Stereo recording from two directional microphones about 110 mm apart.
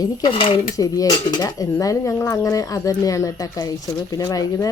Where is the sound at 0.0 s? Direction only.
45° left (ahead or behind).